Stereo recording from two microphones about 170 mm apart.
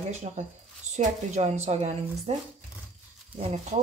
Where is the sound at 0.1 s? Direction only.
45° right (ahead or behind).